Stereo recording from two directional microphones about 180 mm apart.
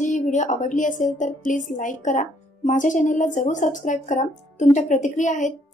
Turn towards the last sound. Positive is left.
turn(degrees=40)  # may be behind; listen again after turning